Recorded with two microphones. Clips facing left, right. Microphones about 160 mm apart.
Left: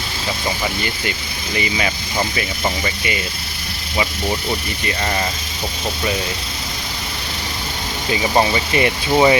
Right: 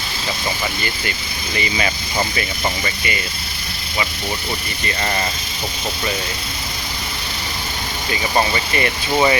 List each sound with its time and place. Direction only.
1.5 s speech: 10° left (ahead or behind)
8.1 s speech: 15° left (ahead or behind)